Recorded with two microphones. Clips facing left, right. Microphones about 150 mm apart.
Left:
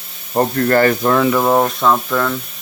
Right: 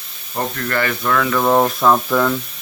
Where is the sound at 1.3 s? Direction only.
5° left (ahead or behind).